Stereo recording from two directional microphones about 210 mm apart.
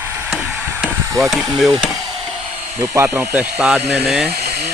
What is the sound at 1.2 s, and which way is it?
Speech, centre (ahead or behind).